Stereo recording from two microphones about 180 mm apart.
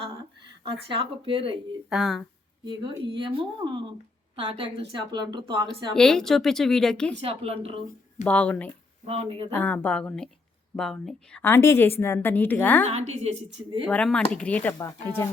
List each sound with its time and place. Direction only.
0.6 s speech: 30° right (ahead or behind)
1.9 s a woman's voice: centre (ahead or behind)
2.6 s speech: 25° right (ahead or behind)
5.9 s a woman's voice: 5° left (ahead or behind)
7.2 s a woman's voice: 35° right (ahead or behind)
8.2 s a woman's voice: 10° left (ahead or behind)
9.0 s a woman's voice: 35° right (ahead or behind)
9.5 s a woman's voice: 10° left (ahead or behind)
12.8 s a woman's voice: 40° right (ahead or behind)
13.8 s a woman's voice: 5° left (ahead or behind)